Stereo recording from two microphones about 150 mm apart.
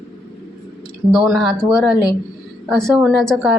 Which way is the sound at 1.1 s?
Centre (ahead or behind).